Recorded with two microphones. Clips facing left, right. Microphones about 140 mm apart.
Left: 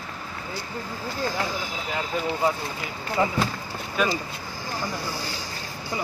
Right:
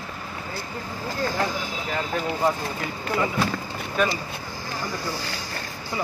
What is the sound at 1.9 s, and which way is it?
Speech, 5° left (ahead or behind).